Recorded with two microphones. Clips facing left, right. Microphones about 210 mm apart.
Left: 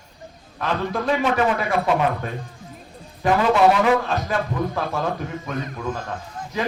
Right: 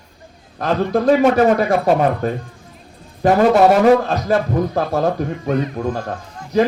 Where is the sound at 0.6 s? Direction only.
40° right (ahead or behind).